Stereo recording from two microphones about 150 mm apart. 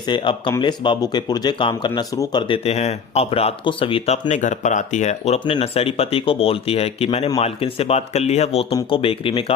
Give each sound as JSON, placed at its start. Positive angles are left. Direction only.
{"t": 0.0, "sound": "speech", "side_deg": 30}
{"t": 2.6, "sound": "speech", "side_deg": 45}